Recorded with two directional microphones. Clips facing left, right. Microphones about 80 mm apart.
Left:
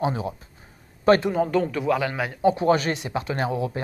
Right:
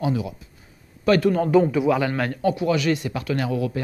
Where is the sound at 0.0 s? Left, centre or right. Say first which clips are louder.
Right 1 dB; left.